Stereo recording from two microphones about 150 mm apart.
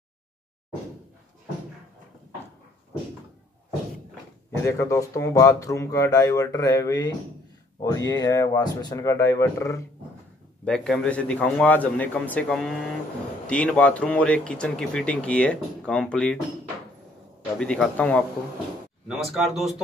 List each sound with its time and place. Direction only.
4.6 s speech: 20° left (ahead or behind)
10.6 s speech: 5° left (ahead or behind)
17.6 s speech: 5° left (ahead or behind)
19.0 s speech: centre (ahead or behind)